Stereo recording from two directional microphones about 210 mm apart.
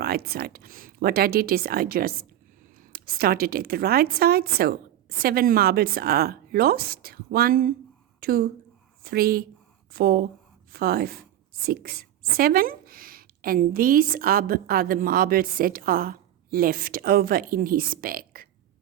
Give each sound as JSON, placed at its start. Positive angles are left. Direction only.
{"t": 0.0, "sound": "a woman's voice", "side_deg": -45}